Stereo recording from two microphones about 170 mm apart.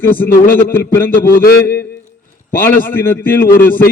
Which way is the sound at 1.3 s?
60° left (ahead or behind).